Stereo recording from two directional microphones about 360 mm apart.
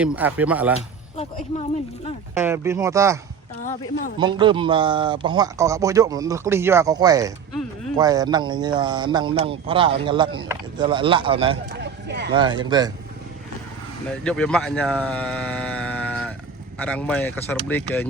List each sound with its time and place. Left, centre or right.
0.0 s speech: centre
0.8 s speech: centre
2.3 s speech: centre
4.2 s speech: centre
11.7 s a sound: right
12.3 s speech: centre
14.3 s speech: centre